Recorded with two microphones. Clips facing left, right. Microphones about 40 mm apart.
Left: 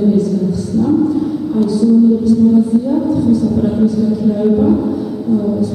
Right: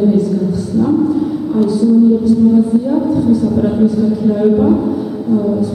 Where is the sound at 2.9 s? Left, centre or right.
Centre.